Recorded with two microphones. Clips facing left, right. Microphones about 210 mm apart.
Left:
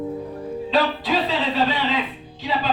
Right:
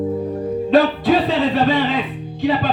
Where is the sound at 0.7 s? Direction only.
50° right (ahead or behind).